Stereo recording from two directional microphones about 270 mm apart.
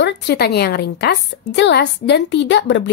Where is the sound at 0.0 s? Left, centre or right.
Left.